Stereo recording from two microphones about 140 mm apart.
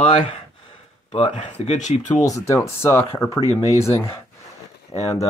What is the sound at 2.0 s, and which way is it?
Speech, 25° left (ahead or behind).